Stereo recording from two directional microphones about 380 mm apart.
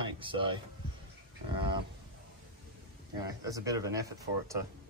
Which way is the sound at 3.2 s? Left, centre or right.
Centre.